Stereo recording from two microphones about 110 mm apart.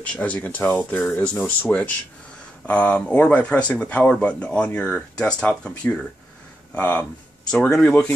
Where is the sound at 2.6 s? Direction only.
10° left (ahead or behind).